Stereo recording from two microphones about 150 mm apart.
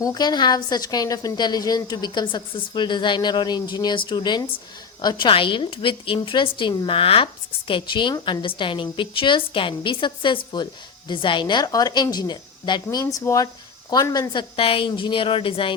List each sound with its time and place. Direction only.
0.0 s a woman's voice: 25° left (ahead or behind)